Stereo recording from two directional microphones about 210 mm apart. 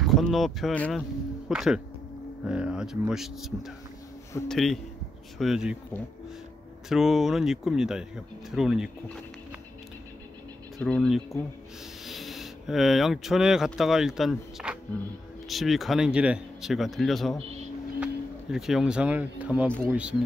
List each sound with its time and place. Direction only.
0.0 s speech: centre (ahead or behind)
6.9 s speech: centre (ahead or behind)
10.8 s speech: 5° left (ahead or behind)